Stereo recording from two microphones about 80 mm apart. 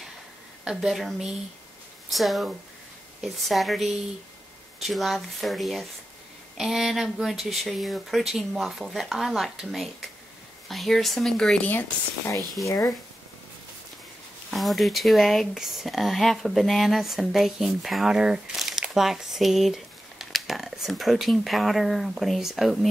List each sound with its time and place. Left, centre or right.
0.7 s speech: centre
12.6 s speech: left
14.5 s speech: centre